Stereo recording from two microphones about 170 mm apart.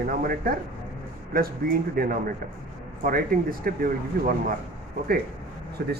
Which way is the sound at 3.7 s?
60° right (ahead or behind).